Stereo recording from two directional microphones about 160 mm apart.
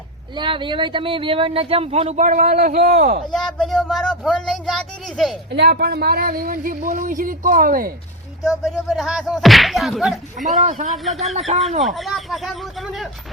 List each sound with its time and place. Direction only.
0.3 s speech: 30° right (ahead or behind); by 2.7 s 60° right (ahead or behind)
3.3 s whip: centre (ahead or behind)
5.5 s speech: 90° right; by 7.9 s 65° right (ahead or behind)
8.4 s whip: centre (ahead or behind)
10.6 s speech: 50° right (ahead or behind)
10.9 s whip: centre (ahead or behind)
11.3 s speech: 40° right (ahead or behind)
11.9 s whip: centre (ahead or behind)